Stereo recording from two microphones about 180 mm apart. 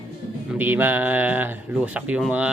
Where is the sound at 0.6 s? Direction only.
10° right (ahead or behind).